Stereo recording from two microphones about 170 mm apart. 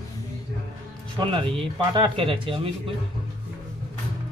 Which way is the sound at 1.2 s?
30° right (ahead or behind).